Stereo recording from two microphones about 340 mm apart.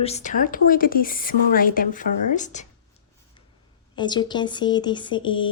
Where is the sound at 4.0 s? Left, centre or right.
Centre.